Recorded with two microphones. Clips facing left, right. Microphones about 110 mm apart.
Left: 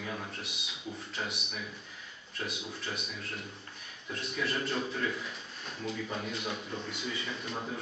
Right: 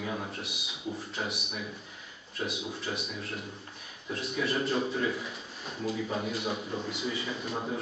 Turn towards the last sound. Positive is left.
turn(degrees=-5)  # may be behind; listen again after turning